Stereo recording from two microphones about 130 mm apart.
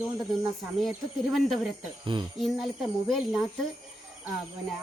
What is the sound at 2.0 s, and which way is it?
Speech, 40° right (ahead or behind).